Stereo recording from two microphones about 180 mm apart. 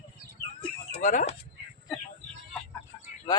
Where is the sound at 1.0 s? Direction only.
45° left (ahead or behind).